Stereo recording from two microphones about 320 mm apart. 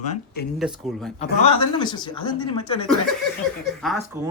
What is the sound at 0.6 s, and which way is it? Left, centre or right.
Speech, centre.